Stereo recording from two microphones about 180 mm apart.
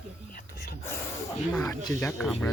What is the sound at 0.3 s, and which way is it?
Whispering, 55° left (ahead or behind).